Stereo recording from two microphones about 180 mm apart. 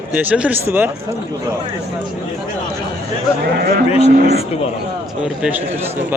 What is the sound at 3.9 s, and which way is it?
Speech, 35° left (ahead or behind).